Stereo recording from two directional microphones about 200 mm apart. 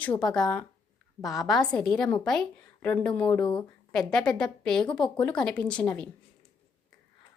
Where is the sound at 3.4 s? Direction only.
20° left (ahead or behind).